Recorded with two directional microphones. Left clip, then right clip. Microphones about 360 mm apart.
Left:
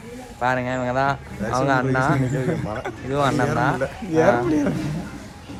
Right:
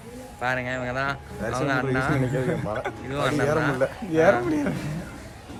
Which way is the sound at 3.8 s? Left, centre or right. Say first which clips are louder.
Even; centre.